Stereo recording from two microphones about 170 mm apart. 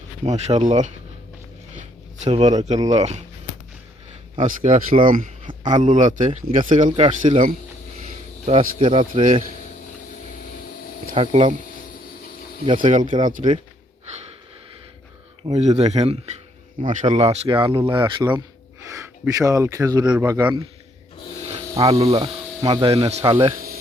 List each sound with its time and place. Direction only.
0.3 s speech: 40° right (ahead or behind)
2.2 s speech: 40° right (ahead or behind)
4.4 s speech: 45° right (ahead or behind)
6.9 s speech: 35° right (ahead or behind)
8.5 s speech: 30° right (ahead or behind)
9.0 s speech: 45° right (ahead or behind)
11.1 s speech: 35° right (ahead or behind)
12.6 s speech: 30° right (ahead or behind)
12.9 s speech: 50° right (ahead or behind)
15.4 s speech: 40° right (ahead or behind); by 18.4 s 25° right (ahead or behind)
18.9 s speech: 15° right (ahead or behind)
20.4 s speech: 25° right (ahead or behind)
21.8 s speech: 35° right (ahead or behind)